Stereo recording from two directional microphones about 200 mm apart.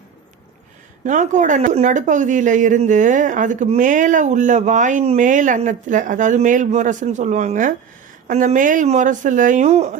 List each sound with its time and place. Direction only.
1.0 s speech: 40° right (ahead or behind)